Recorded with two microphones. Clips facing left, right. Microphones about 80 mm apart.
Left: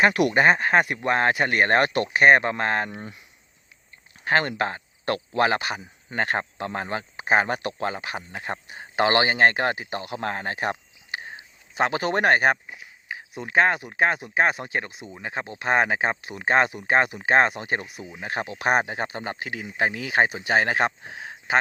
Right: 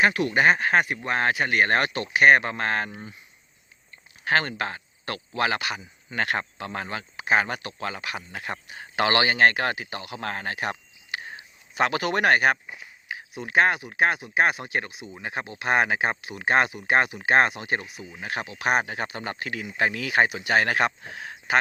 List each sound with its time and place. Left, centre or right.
0.3 s speech: left
2.9 s speech: left
4.2 s speech: left
14.8 s speech: left
15.1 s speech: left